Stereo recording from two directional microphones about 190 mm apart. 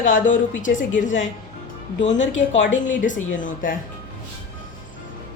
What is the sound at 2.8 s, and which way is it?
Speech, 45° left (ahead or behind).